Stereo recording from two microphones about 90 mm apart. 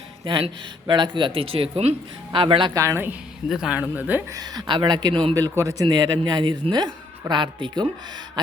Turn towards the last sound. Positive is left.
turn(degrees=-60)  # may be behind; listen again after turning